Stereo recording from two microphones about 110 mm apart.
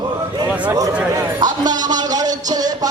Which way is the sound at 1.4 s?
40° right (ahead or behind).